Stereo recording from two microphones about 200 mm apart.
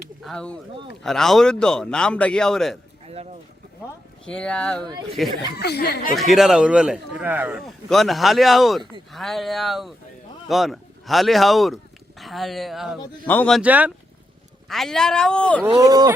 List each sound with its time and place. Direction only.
0.2 s a man's voice: 5° left (ahead or behind)
4.3 s a man's voice: 5° left (ahead or behind)
5.5 s speech: 55° left (ahead or behind)
6.3 s a man's voice: centre (ahead or behind)
13.6 s a man's voice: 5° right (ahead or behind)
15.7 s speech: 20° right (ahead or behind)